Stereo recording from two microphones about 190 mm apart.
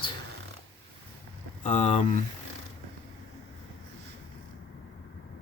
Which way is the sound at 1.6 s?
35° left (ahead or behind).